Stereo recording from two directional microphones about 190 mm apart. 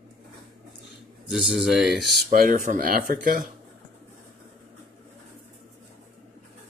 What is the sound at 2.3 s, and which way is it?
Speech, 45° right (ahead or behind).